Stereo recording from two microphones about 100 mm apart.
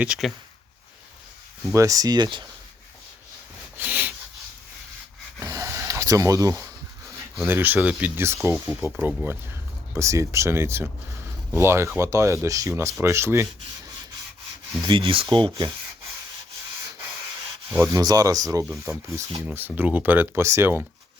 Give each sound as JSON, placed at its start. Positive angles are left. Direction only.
{"t": 0.2, "sound": "speech", "side_deg": 0}
{"t": 1.7, "sound": "speech", "side_deg": -35}
{"t": 3.8, "sound": "sniff", "side_deg": -15}
{"t": 5.4, "sound": "rub", "side_deg": -30}
{"t": 7.4, "sound": "speech", "side_deg": -20}
{"t": 14.8, "sound": "speech", "side_deg": -65}
{"t": 17.9, "sound": "speech", "side_deg": -35}
{"t": 19.5, "sound": "speech", "side_deg": -20}